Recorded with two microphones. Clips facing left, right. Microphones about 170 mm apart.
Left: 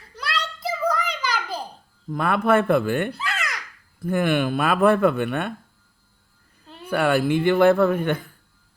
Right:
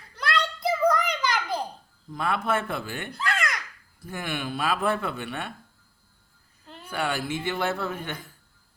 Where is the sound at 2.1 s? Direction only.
55° left (ahead or behind).